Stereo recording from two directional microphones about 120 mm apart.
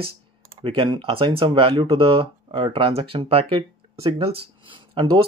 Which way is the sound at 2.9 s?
50° right (ahead or behind).